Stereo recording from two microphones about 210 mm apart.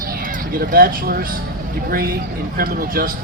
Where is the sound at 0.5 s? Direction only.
45° right (ahead or behind).